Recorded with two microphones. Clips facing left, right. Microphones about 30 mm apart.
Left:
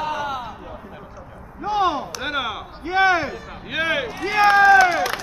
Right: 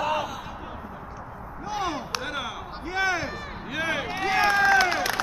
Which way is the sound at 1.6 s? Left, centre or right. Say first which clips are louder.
Left 9 dB; left.